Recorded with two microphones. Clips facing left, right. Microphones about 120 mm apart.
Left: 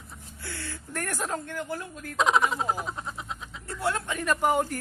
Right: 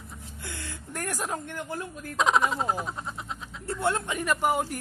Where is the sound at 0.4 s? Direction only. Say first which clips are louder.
Left 2 dB; 20° right (ahead or behind).